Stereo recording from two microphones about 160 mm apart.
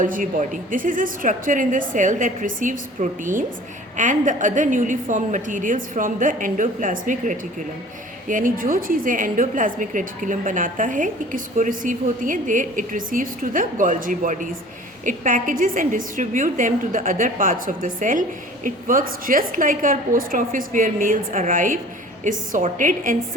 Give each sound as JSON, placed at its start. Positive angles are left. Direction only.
{"t": 0.0, "sound": "a woman's voice", "side_deg": -55}